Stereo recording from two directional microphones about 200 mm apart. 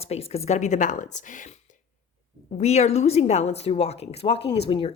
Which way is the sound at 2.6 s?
30° left (ahead or behind).